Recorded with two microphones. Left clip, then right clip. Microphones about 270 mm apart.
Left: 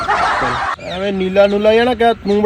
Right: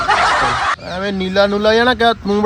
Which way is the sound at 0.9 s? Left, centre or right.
Right.